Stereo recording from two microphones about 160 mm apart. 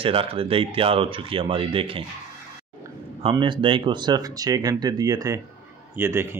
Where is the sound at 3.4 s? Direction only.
30° right (ahead or behind).